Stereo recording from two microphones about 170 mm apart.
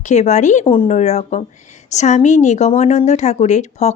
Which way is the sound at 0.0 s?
45° left (ahead or behind).